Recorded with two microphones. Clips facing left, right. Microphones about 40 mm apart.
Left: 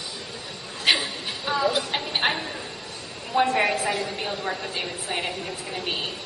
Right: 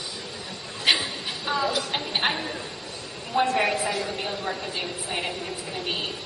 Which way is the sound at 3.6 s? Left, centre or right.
Centre.